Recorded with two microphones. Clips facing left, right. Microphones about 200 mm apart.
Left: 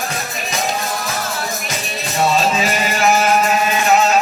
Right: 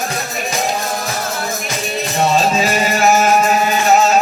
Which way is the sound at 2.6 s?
40° right (ahead or behind).